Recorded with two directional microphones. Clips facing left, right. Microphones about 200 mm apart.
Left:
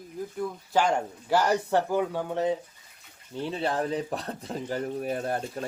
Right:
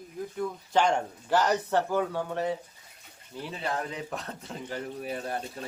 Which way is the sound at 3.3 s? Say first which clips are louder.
Left 5 dB; 35° left (ahead or behind).